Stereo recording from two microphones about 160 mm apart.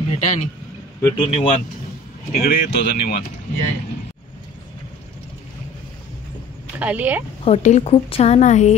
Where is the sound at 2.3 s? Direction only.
70° left (ahead or behind).